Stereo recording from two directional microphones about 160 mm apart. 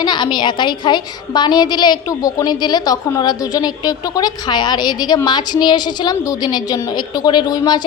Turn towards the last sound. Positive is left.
turn(degrees=25)  # may be behind; listen again after turning